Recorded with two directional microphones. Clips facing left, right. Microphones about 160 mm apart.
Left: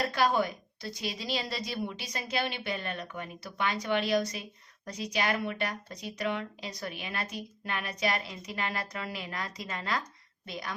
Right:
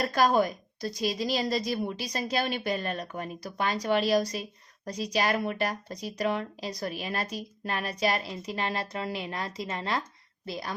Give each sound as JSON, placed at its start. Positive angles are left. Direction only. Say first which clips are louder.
{"t": 0.1, "sound": "a woman's voice", "louder": "right 4 dB", "side_deg": -40}